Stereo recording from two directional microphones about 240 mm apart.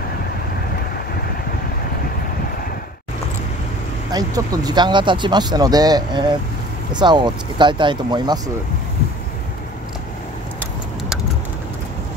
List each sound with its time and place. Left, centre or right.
4.1 s speech: centre